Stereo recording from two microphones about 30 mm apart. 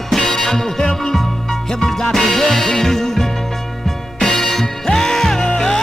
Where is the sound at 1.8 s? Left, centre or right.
Centre.